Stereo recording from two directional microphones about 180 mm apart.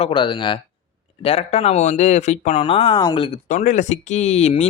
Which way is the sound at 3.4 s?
45° left (ahead or behind).